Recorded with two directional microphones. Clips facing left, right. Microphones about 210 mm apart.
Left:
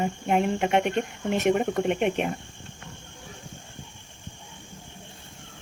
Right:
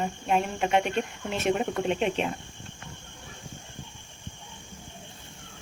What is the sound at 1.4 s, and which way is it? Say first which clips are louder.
Speech: left 3 dB; 15° left (ahead or behind).